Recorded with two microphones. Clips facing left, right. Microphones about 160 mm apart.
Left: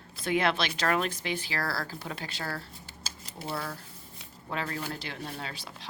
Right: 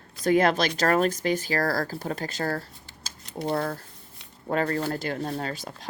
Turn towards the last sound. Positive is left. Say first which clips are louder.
# right 8 dB
turn(degrees=-45)  # may be behind; listen again after turning